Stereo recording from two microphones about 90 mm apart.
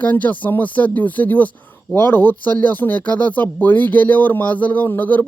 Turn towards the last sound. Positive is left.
turn(degrees=20)  # may be behind; listen again after turning